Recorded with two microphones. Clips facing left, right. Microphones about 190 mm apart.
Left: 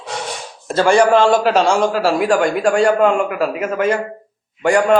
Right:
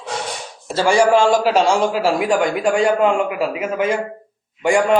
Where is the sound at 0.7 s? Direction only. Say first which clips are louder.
Left 3 dB; 55° left (ahead or behind).